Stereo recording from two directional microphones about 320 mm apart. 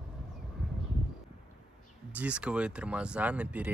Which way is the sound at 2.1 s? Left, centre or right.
Centre.